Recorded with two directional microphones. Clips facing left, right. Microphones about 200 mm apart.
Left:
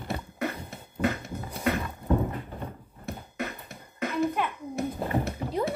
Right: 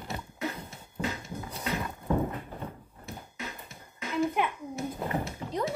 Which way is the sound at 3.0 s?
60° left (ahead or behind).